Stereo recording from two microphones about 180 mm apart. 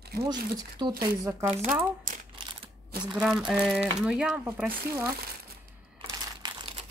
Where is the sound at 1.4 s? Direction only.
35° right (ahead or behind).